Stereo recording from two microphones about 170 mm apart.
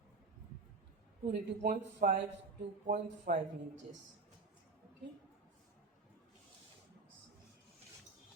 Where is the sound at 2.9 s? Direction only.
50° right (ahead or behind).